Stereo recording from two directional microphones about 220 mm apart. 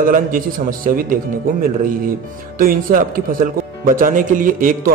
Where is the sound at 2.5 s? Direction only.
40° right (ahead or behind).